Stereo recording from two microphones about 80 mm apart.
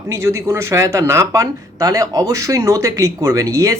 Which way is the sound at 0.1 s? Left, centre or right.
Right.